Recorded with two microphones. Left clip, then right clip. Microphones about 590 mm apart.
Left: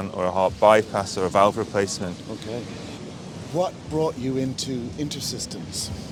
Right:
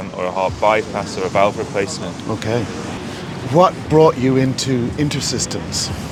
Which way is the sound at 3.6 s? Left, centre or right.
Right.